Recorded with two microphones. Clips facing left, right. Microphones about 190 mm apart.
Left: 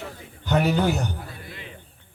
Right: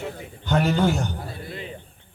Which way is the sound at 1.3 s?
35° right (ahead or behind).